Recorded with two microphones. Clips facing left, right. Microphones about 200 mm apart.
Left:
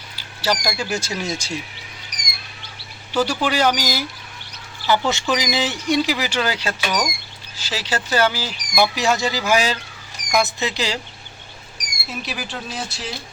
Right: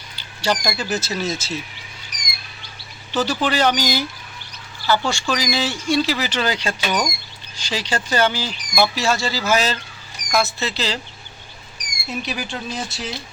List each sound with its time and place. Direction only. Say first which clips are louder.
0.2 s speech: right 1 dB; 5° left (ahead or behind)
3.1 s speech: even; 10° left (ahead or behind)
4.9 s speech: left 1 dB; 20° left (ahead or behind)
12.0 s speech: right 3 dB; centre (ahead or behind)